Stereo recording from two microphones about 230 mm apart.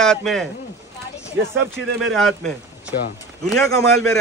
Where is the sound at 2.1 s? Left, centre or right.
Centre.